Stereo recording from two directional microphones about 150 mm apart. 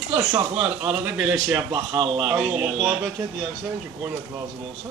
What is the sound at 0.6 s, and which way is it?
A man's voice, 10° right (ahead or behind).